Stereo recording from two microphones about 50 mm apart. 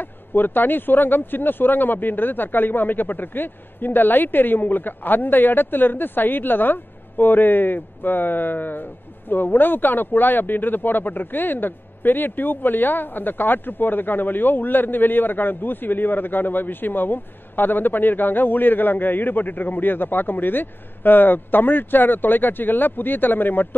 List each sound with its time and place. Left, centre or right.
0.0 s speech: left